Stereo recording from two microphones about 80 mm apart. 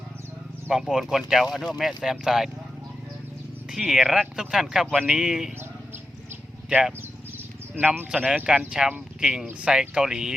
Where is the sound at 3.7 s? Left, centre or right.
Centre.